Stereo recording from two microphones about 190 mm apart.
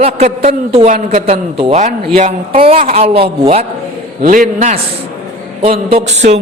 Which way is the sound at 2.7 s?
45° right (ahead or behind).